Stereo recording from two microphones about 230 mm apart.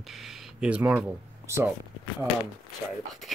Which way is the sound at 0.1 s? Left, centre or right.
Centre.